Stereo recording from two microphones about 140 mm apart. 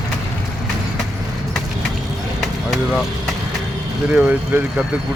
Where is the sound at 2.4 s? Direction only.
Centre (ahead or behind).